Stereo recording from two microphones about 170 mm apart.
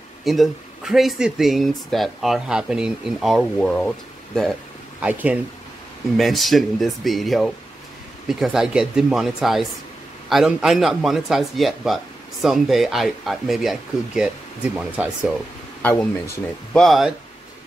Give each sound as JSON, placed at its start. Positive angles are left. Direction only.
{"t": 0.2, "sound": "speech", "side_deg": 0}
{"t": 5.0, "sound": "speech", "side_deg": -10}
{"t": 15.8, "sound": "speech", "side_deg": 10}